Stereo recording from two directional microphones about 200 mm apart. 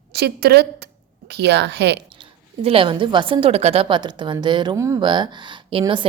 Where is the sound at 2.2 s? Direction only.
30° right (ahead or behind).